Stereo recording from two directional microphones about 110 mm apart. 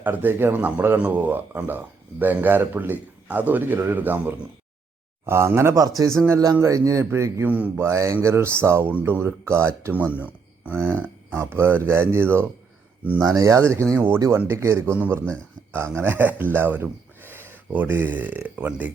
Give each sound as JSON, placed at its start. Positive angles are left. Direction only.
{"t": 0.0, "sound": "speech", "side_deg": -15}
{"t": 7.4, "sound": "speech", "side_deg": -15}
{"t": 15.0, "sound": "speech", "side_deg": -15}
{"t": 15.3, "sound": "speech", "side_deg": -25}